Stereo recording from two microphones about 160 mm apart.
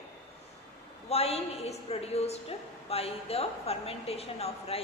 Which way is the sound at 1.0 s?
40° left (ahead or behind).